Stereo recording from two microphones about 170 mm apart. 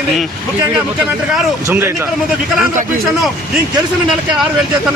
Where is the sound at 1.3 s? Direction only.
10° right (ahead or behind).